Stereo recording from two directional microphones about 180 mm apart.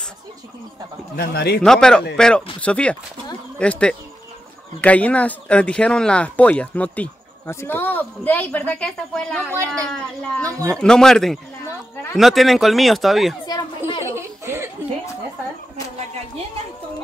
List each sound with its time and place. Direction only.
1.1 s a man's voice: 60° left (ahead or behind)
1.6 s speech: 5° left (ahead or behind)
9.5 s speech: 15° right (ahead or behind)
9.8 s speech: 5° left (ahead or behind)
14.0 s a sound: 15° right (ahead or behind)